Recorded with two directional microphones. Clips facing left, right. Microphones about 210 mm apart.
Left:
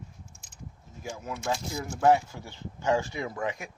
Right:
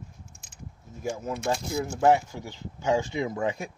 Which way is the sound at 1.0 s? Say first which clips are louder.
Right 6 dB; 45° right (ahead or behind).